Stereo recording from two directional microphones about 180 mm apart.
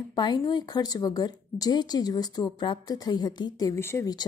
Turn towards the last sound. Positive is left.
turn(degrees=20)  # may be behind; listen again after turning